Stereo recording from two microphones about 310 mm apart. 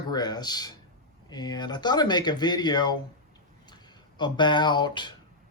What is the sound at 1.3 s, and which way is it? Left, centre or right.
Speech, centre.